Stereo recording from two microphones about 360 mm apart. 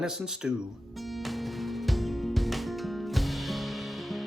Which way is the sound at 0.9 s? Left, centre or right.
Centre.